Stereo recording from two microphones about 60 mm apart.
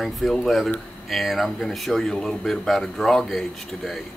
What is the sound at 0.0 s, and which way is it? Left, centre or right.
Speech, centre.